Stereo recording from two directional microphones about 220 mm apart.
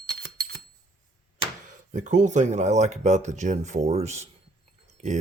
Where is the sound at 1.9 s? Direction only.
35° right (ahead or behind).